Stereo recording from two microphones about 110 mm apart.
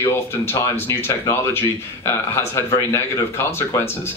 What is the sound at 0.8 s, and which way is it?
Speech, 20° left (ahead or behind).